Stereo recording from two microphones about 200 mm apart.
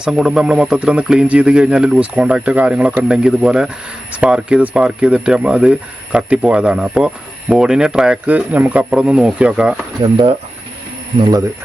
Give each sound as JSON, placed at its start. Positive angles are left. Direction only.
{"t": 0.0, "sound": "speech", "side_deg": -5}
{"t": 10.0, "sound": "speech", "side_deg": -25}